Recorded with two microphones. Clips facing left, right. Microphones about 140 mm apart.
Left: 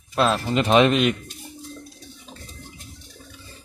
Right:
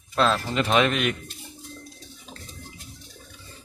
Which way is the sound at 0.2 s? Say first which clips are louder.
Left 2 dB; 15° left (ahead or behind).